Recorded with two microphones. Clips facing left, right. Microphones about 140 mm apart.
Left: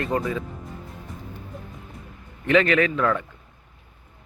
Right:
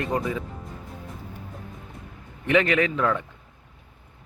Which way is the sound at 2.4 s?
20° right (ahead or behind).